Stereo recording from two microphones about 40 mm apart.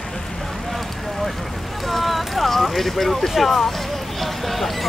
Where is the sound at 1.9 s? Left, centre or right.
Centre.